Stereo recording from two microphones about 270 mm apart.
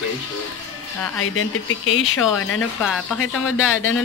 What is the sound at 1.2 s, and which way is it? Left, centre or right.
Speech, left.